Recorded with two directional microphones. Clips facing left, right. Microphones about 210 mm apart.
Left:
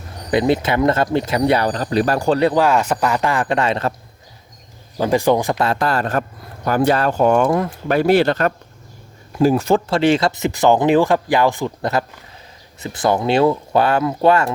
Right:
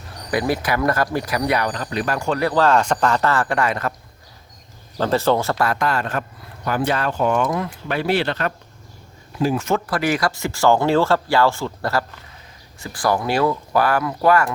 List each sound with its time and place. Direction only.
0.3 s speech: 25° left (ahead or behind)
2.4 s speech: 20° left (ahead or behind)
2.6 s speech: 5° left (ahead or behind); by 3.9 s 25° left (ahead or behind)
4.9 s speech: 15° left (ahead or behind)